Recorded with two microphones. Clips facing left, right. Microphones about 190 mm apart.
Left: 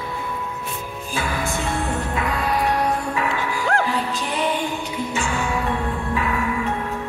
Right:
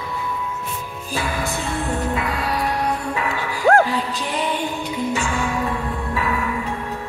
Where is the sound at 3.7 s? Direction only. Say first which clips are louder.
Right 8 dB; 45° right (ahead or behind).